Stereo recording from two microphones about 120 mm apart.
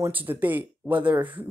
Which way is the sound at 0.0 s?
15° right (ahead or behind).